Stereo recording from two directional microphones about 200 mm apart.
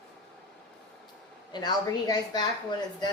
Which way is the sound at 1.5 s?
20° left (ahead or behind).